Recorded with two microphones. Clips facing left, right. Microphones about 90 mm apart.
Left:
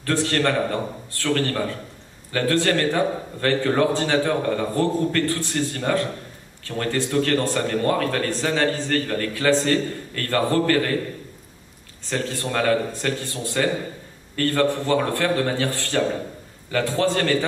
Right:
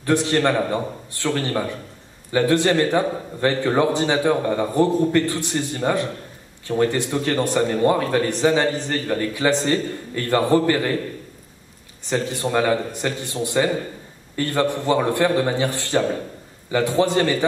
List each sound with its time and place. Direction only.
0.0 s speech: 15° right (ahead or behind)
12.0 s speech: 20° right (ahead or behind)